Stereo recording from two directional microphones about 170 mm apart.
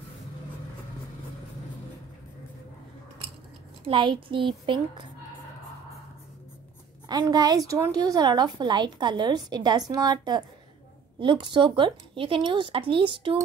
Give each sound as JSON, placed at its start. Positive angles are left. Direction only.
{"t": 3.8, "sound": "a woman's voice", "side_deg": -30}
{"t": 7.1, "sound": "a woman's voice", "side_deg": -25}